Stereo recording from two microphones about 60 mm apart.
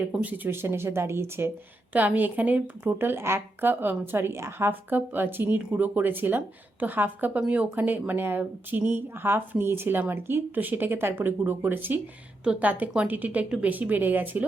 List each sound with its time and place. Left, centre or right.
0.0 s a woman's voice: right
0.5 s speech: right
1.9 s a woman's voice: right
7.3 s a woman's voice: centre